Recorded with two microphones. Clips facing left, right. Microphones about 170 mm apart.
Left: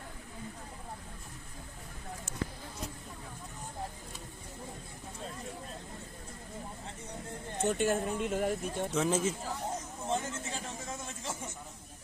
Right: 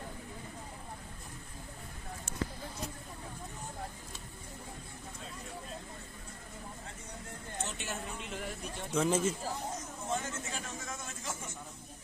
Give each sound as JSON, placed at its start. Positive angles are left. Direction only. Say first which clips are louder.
{"t": 7.6, "sound": "speech", "louder": "left 12 dB", "side_deg": 50}
{"t": 8.9, "sound": "speech", "louder": "right 1 dB", "side_deg": 0}
{"t": 10.1, "sound": "a sound", "louder": "left 3 dB", "side_deg": 25}